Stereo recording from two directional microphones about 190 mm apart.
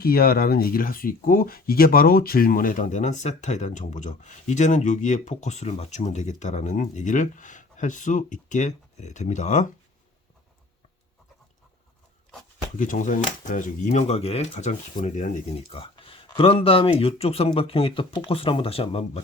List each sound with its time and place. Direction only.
0.0 s speech: 55° left (ahead or behind)
12.7 s speech: 40° left (ahead or behind)